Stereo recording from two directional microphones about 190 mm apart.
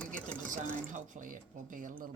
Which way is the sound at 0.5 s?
40° right (ahead or behind).